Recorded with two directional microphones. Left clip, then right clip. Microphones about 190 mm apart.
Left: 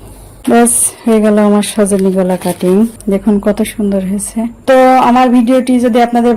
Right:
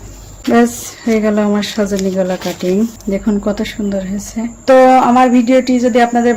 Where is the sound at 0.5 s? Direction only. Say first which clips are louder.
Left 3 dB; 30° left (ahead or behind).